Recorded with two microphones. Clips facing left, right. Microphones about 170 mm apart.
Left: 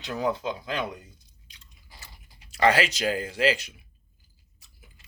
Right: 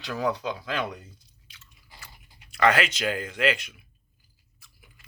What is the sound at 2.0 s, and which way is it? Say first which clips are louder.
Speech: right 1 dB; 30° left (ahead or behind).